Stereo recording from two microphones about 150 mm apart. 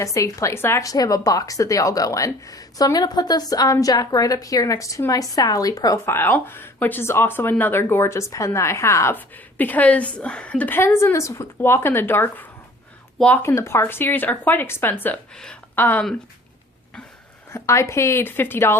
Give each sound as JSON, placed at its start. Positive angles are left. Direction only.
{"t": 0.0, "sound": "a woman's voice", "side_deg": 20}
{"t": 17.5, "sound": "a woman's voice", "side_deg": 20}